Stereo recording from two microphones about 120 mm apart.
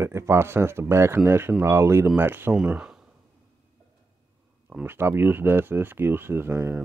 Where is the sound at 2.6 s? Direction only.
5° right (ahead or behind).